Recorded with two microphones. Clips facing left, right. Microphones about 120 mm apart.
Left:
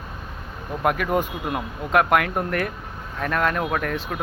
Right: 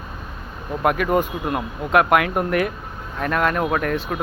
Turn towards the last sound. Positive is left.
turn(degrees=0)  # may be behind; listen again after turning